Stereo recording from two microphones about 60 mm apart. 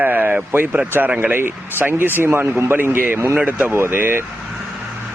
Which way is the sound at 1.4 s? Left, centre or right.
Right.